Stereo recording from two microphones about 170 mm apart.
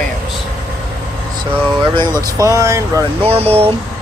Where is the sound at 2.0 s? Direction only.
15° left (ahead or behind).